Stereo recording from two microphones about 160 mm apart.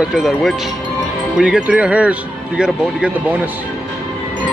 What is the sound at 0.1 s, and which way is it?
Speech, centre (ahead or behind).